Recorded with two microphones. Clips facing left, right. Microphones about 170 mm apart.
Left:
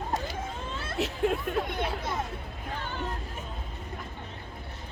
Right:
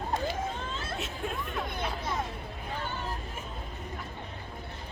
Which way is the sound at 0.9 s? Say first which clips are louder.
Left 11 dB; 70° left (ahead or behind).